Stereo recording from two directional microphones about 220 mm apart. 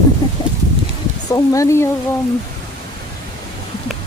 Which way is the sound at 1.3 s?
15° left (ahead or behind).